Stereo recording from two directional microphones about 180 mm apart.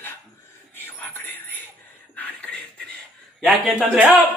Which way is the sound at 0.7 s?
10° left (ahead or behind).